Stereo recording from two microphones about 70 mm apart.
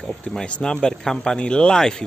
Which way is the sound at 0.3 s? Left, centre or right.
Centre.